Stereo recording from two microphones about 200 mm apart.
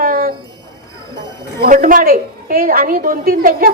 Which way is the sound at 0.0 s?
45° right (ahead or behind).